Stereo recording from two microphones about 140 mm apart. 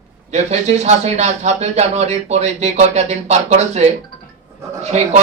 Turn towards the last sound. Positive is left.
turn(degrees=-50)  # may be behind; listen again after turning